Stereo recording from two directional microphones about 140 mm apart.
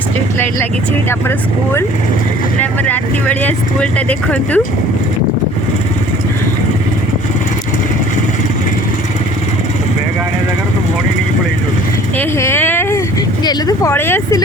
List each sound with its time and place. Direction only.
2.6 s speech: 10° left (ahead or behind)
12.4 s a sound: 15° left (ahead or behind)
13.4 s speech: 30° left (ahead or behind)
13.9 s speech: 15° left (ahead or behind)